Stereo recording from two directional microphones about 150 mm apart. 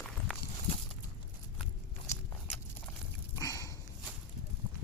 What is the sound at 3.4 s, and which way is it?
Dog, 20° left (ahead or behind).